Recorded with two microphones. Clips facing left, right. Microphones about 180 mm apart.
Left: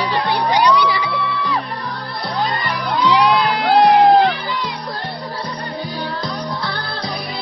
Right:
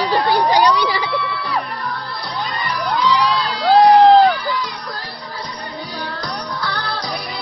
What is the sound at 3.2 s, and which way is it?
Crowd, 60° left (ahead or behind).